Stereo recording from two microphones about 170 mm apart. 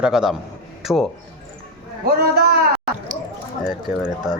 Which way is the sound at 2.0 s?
65° right (ahead or behind).